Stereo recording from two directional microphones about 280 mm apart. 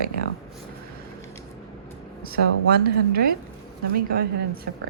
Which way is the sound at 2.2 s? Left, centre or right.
Right.